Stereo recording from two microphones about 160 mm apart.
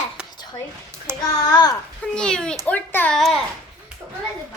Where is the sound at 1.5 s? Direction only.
25° left (ahead or behind).